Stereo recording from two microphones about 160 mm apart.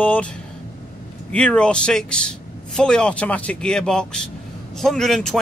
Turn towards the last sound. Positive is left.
turn(degrees=0)  # may be behind; listen again after turning